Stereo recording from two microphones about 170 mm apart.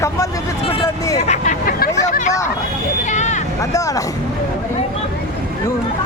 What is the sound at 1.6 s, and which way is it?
Speech, 60° left (ahead or behind).